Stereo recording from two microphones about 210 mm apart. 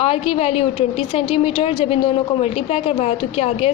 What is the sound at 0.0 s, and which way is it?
A woman's voice, 30° left (ahead or behind).